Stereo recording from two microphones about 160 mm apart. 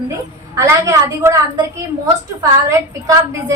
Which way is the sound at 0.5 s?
20° right (ahead or behind).